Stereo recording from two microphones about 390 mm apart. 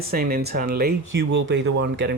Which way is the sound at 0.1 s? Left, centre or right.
Right.